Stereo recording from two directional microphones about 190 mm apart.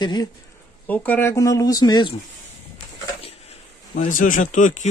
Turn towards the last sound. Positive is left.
turn(degrees=40)  # may be behind; listen again after turning